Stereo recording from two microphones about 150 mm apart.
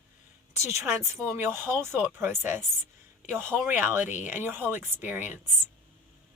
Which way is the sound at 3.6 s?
15° right (ahead or behind).